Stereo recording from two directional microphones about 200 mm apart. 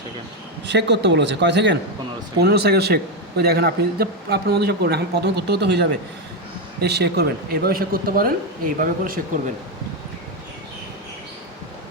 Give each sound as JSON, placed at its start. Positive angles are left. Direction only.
{"t": 0.7, "sound": "a man's voice", "side_deg": -60}